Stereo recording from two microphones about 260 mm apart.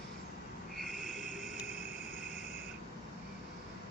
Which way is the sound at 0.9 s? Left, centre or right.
Left.